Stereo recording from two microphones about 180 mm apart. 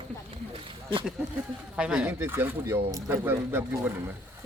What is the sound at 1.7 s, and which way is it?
Speech, 5° right (ahead or behind).